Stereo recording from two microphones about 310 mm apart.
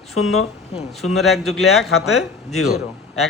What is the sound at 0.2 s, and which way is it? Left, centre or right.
Speech, left.